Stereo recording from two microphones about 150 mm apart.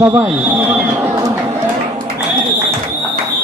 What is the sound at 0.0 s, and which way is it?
Speech, 15° right (ahead or behind).